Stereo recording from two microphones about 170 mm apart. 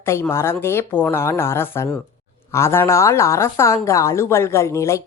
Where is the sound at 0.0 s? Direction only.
15° left (ahead or behind).